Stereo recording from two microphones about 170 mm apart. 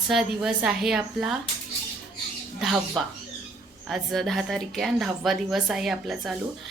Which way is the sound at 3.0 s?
Centre (ahead or behind).